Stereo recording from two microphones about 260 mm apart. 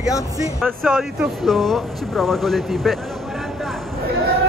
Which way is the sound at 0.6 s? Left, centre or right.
Centre.